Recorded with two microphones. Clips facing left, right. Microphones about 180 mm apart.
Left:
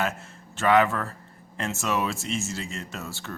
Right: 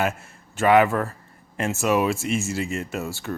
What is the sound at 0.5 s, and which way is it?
Speech, 10° right (ahead or behind).